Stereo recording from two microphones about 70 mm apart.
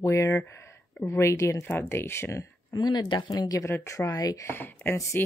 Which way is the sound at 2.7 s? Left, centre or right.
Left.